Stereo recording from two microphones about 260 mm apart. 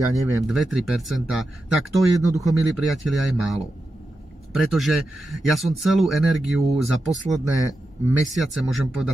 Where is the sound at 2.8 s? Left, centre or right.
Centre.